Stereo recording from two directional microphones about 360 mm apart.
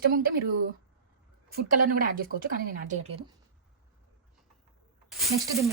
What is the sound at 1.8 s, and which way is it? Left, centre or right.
A woman's voice, right.